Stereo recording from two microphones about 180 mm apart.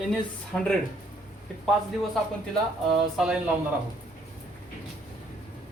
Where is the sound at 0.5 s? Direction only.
5° left (ahead or behind).